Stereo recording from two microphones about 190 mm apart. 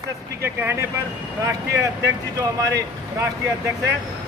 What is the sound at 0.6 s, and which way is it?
Speech, 10° right (ahead or behind).